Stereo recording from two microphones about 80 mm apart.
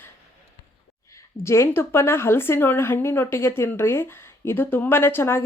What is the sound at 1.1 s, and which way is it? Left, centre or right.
A woman's voice, left.